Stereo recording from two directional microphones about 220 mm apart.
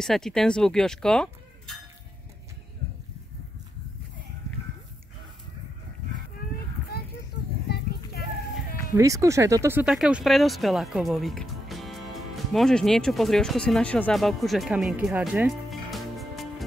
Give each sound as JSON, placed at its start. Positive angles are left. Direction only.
{"t": 0.0, "sound": "speech", "side_deg": 0}
{"t": 7.6, "sound": "a sound", "side_deg": 45}
{"t": 8.9, "sound": "speech", "side_deg": -15}